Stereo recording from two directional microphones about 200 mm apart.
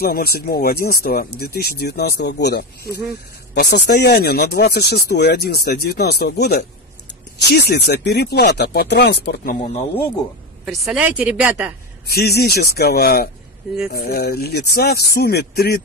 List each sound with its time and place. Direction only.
0.0 s speech: 50° left (ahead or behind)
10.6 s a woman's voice: centre (ahead or behind)
12.1 s speech: 50° left (ahead or behind)